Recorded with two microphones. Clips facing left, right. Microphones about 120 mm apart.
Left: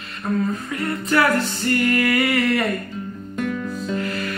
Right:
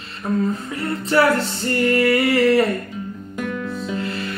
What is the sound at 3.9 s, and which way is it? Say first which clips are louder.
Music: left 2 dB; 25° right (ahead or behind).